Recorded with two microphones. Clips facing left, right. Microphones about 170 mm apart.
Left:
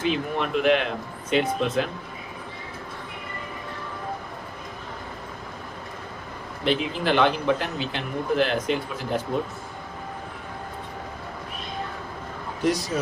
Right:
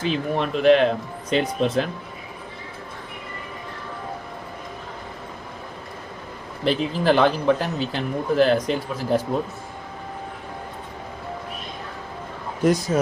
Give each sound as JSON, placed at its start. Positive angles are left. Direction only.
{"t": 0.0, "sound": "speech", "side_deg": -35}
{"t": 6.7, "sound": "speech", "side_deg": -40}
{"t": 12.6, "sound": "speech", "side_deg": -50}